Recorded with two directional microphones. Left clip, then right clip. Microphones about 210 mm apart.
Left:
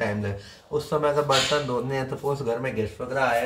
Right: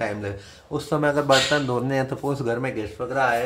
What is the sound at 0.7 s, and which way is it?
Speech, 45° right (ahead or behind).